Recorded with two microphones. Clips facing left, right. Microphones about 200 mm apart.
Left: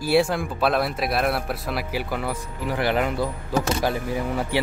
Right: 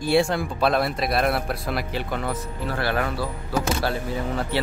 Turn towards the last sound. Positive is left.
turn(degrees=15)  # may be behind; listen again after turning